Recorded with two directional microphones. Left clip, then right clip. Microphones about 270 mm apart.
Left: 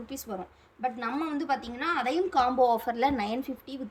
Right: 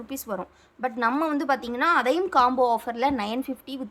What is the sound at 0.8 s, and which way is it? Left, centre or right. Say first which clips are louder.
A woman's voice: right 7 dB; centre.